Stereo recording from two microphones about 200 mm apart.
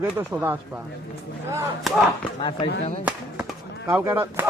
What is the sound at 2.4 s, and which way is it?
Speech, 25° left (ahead or behind).